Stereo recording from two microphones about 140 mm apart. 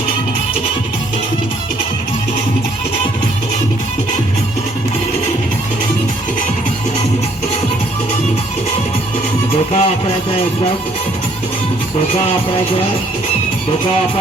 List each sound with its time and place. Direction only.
9.7 s music: 40° left (ahead or behind)